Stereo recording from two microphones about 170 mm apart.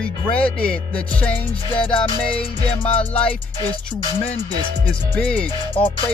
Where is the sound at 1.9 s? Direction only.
35° left (ahead or behind).